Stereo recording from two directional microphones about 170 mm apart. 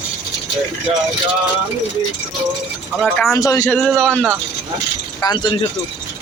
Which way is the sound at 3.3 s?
20° left (ahead or behind).